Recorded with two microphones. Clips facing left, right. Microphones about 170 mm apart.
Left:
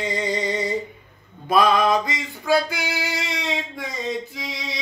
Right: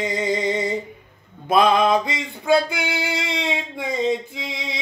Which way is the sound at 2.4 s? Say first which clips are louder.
Right 2 dB; 20° right (ahead or behind).